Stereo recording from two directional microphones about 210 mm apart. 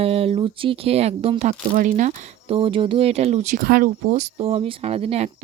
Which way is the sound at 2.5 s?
25° right (ahead or behind).